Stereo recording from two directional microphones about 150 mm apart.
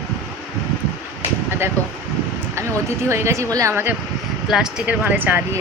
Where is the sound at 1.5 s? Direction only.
15° right (ahead or behind).